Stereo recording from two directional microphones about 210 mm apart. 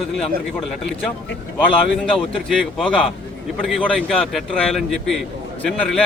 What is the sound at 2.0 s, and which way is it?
A man's voice, centre (ahead or behind).